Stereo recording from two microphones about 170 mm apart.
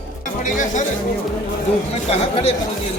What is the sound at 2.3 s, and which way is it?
Speech, 35° left (ahead or behind).